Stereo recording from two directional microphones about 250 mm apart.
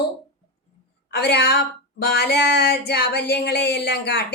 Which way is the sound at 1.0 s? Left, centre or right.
Left.